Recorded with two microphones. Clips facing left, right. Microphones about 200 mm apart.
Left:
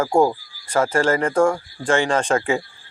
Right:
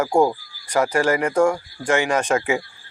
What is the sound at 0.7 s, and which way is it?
Speech, 15° right (ahead or behind).